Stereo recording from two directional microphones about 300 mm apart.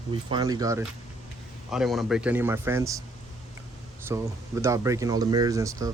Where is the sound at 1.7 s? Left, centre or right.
Centre.